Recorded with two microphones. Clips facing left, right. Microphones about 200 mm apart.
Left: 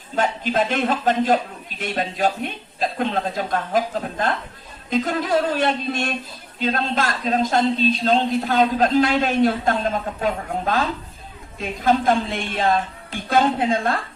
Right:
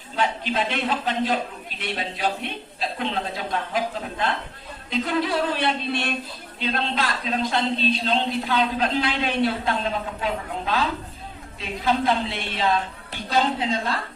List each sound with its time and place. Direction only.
0.2 s a man's voice: 45° left (ahead or behind)